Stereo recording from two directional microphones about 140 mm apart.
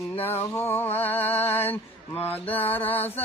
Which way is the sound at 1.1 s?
45° left (ahead or behind).